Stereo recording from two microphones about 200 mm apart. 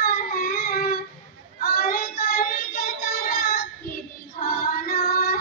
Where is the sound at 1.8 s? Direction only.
45° left (ahead or behind).